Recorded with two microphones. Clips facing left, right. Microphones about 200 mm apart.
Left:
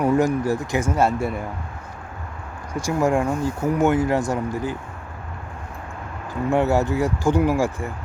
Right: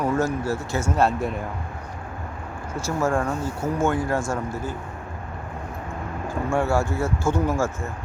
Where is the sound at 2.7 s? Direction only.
15° left (ahead or behind).